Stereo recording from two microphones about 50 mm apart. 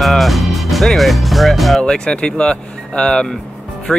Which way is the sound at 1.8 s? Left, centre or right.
Centre.